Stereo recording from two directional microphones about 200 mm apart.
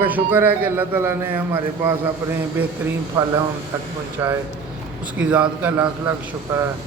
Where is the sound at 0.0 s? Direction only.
10° right (ahead or behind).